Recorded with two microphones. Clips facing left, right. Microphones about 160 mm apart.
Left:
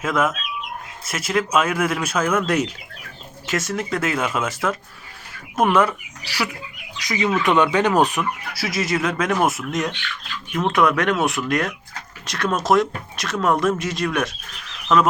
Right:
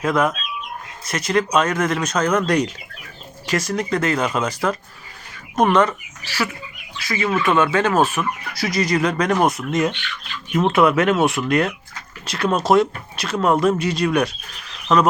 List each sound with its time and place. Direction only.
0.0 s speech: centre (ahead or behind)
8.5 s speech: centre (ahead or behind)
14.7 s a sound: centre (ahead or behind)